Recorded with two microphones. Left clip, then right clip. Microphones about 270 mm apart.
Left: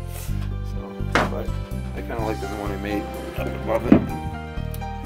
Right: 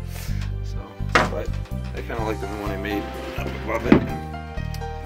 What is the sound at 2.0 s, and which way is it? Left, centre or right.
Speech, centre.